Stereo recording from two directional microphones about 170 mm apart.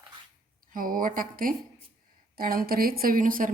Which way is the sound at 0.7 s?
55° right (ahead or behind).